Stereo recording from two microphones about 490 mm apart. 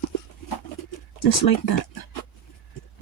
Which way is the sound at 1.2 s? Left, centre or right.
Left.